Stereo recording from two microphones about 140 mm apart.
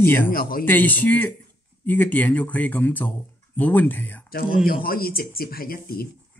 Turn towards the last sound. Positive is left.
turn(degrees=90)